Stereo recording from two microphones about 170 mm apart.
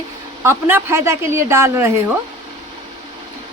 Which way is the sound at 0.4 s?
15° right (ahead or behind).